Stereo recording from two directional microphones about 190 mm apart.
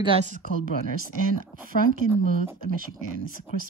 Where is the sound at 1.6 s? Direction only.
45° right (ahead or behind).